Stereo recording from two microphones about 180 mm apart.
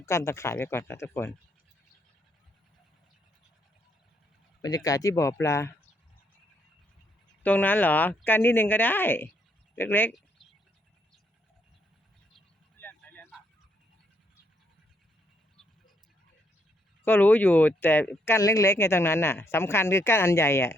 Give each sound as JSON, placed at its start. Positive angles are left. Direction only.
{"t": 0.0, "sound": "speech", "side_deg": 15}
{"t": 4.6, "sound": "speech", "side_deg": 20}
{"t": 7.4, "sound": "speech", "side_deg": 10}
{"t": 12.8, "sound": "vehicle", "side_deg": 10}
{"t": 17.0, "sound": "speech", "side_deg": 10}